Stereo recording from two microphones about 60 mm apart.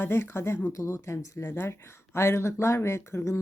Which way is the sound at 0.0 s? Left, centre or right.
Left.